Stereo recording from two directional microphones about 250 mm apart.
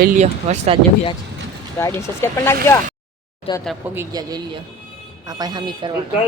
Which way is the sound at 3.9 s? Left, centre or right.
Centre.